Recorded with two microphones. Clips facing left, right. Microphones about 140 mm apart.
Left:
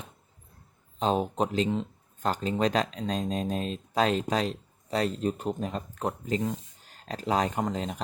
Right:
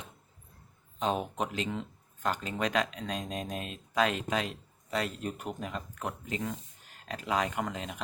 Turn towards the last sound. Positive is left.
turn(degrees=35)  # may be behind; listen again after turning